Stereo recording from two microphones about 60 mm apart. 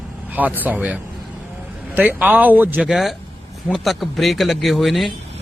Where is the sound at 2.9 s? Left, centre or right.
Centre.